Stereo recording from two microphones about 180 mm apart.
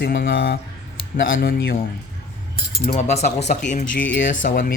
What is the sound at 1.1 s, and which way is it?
Speech, 55° left (ahead or behind).